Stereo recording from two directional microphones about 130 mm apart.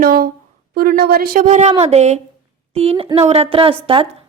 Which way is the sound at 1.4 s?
65° right (ahead or behind).